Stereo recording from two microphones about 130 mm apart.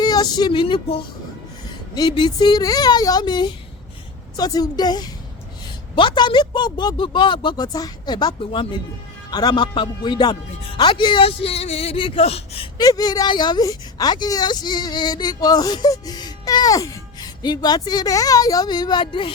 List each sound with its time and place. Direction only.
0.0 s speech: 30° left (ahead or behind); by 11.9 s 55° left (ahead or behind)
11.9 s speech: 40° left (ahead or behind)
12.2 s speech: 50° left (ahead or behind)
12.7 s speech: 30° left (ahead or behind)